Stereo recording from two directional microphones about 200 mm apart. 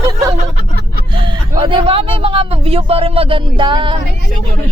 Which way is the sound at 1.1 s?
25° right (ahead or behind).